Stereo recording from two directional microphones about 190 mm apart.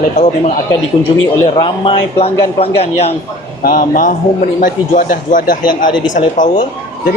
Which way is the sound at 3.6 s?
45° left (ahead or behind).